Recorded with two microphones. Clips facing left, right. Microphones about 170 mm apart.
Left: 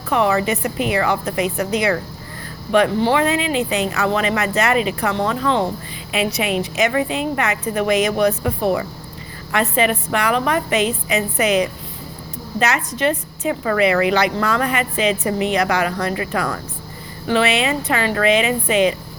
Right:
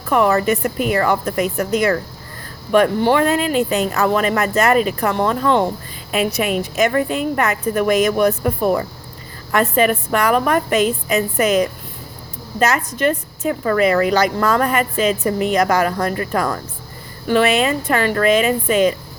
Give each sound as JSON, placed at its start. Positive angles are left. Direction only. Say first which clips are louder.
{"t": 0.1, "sound": "a woman's voice", "louder": "right 2 dB", "side_deg": -45}